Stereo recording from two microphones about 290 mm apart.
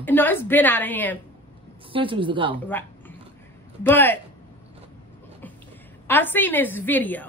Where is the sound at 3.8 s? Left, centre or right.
Centre.